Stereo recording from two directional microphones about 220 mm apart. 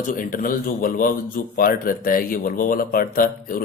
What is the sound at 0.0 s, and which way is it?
A man's voice, 35° left (ahead or behind).